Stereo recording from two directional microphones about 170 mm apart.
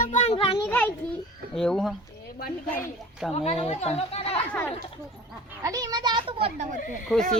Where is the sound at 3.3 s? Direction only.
35° left (ahead or behind).